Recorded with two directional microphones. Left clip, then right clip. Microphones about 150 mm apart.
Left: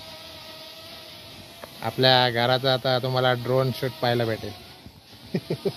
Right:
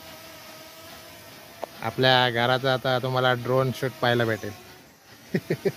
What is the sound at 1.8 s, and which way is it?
A man's voice, 10° right (ahead or behind).